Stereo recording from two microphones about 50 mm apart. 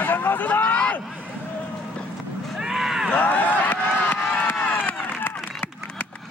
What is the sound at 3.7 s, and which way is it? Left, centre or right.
Crowd, left.